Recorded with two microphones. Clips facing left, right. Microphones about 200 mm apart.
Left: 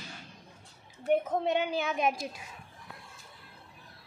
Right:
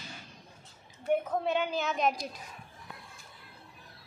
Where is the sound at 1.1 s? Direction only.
20° left (ahead or behind).